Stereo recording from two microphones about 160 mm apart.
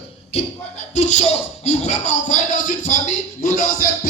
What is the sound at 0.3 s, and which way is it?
Speech, 40° left (ahead or behind).